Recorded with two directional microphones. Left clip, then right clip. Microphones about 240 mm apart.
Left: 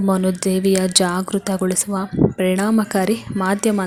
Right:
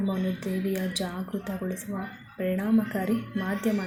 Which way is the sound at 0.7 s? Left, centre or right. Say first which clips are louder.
Left 14 dB; left.